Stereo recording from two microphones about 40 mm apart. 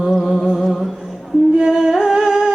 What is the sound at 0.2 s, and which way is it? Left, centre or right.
Humming, centre.